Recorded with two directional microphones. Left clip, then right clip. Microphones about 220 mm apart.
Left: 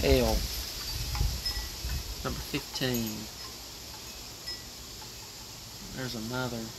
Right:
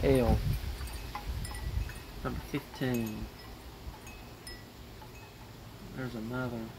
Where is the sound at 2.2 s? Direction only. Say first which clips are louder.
Left 2 dB; 10° left (ahead or behind).